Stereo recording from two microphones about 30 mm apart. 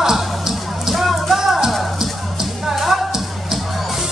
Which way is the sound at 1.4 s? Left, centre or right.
Centre.